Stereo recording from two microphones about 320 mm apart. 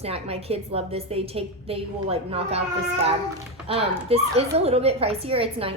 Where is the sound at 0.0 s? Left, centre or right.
Centre.